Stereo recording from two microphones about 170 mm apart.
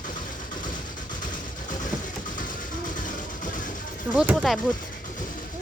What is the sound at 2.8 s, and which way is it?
Music, 50° left (ahead or behind).